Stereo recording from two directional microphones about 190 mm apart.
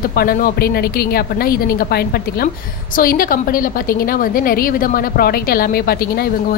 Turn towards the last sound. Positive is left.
turn(degrees=55)  # may be behind; listen again after turning